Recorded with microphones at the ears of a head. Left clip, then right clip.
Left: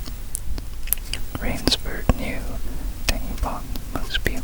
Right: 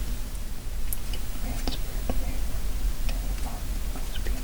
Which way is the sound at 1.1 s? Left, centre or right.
Left.